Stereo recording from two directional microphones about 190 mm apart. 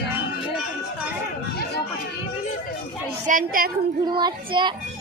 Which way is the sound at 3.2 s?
45° right (ahead or behind).